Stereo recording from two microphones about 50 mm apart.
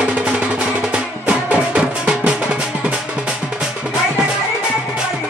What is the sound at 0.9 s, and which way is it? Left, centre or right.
Music, right.